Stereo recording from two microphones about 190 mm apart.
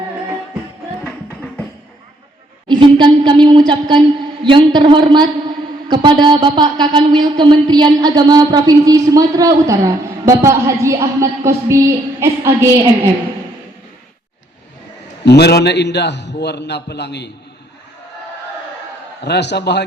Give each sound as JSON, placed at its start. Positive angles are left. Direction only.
{"t": 2.6, "sound": "speech", "side_deg": -25}
{"t": 15.2, "sound": "a man's voice", "side_deg": 60}
{"t": 19.2, "sound": "a man's voice", "side_deg": 65}